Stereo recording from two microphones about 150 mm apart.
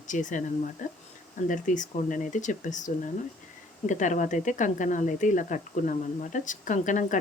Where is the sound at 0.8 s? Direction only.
60° left (ahead or behind).